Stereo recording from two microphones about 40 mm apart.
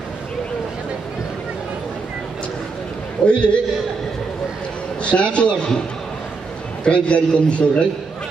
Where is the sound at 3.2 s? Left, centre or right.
Left.